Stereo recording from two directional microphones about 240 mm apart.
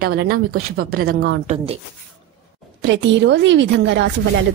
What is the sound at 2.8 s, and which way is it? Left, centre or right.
A woman's voice, right.